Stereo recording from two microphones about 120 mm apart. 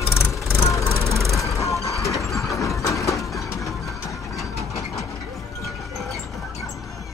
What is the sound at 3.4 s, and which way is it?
Music, 25° left (ahead or behind).